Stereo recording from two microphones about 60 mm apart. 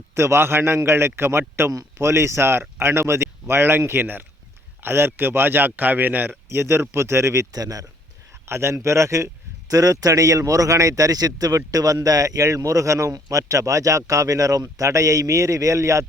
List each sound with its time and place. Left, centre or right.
0.1 s speech: right
7.5 s speech: right
8.4 s speech: right